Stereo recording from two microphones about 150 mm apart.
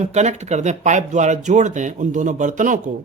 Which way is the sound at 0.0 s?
50° right (ahead or behind).